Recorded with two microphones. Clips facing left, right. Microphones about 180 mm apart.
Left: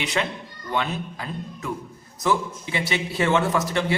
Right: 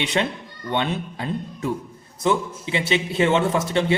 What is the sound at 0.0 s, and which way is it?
A man's voice, 25° right (ahead or behind).